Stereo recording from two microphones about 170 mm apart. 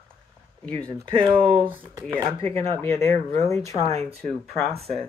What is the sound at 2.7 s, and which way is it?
Speech, 15° left (ahead or behind).